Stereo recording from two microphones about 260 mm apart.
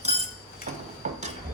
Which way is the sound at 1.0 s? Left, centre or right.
Right.